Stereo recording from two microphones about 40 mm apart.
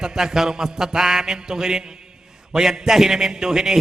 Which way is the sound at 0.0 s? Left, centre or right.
Centre.